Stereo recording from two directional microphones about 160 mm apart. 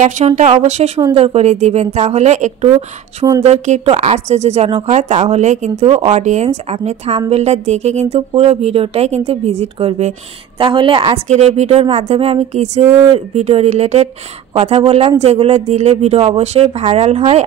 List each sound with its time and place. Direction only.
0.4 s speech: 45° right (ahead or behind)
11.2 s speech: 45° right (ahead or behind)
12.8 s speech: 15° right (ahead or behind)
13.1 s speech: 40° right (ahead or behind)